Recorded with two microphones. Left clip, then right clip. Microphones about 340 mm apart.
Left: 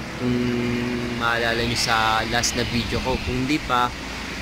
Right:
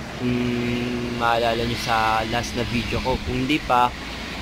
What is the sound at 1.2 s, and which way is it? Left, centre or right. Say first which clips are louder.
Speech: right 2 dB; centre.